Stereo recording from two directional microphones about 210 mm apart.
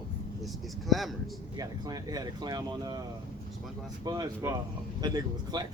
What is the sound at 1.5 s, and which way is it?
Speech, 15° right (ahead or behind).